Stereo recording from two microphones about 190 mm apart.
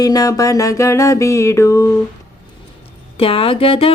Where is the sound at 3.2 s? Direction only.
30° left (ahead or behind).